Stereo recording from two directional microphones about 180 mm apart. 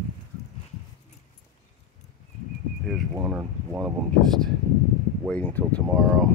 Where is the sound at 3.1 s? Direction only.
10° right (ahead or behind).